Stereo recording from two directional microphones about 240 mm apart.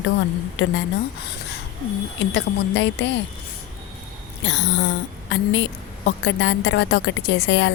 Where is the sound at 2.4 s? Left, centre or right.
Left.